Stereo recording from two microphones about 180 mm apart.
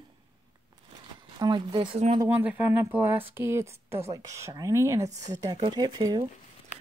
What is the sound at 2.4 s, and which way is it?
Speech, 10° right (ahead or behind).